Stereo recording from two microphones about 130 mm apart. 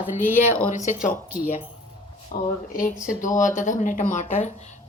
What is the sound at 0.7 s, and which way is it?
Speech, 70° left (ahead or behind).